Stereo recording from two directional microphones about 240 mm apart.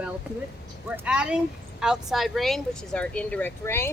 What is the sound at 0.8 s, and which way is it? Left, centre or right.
Speech, centre.